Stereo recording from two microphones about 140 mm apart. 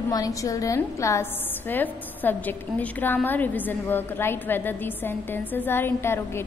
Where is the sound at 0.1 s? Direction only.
25° left (ahead or behind).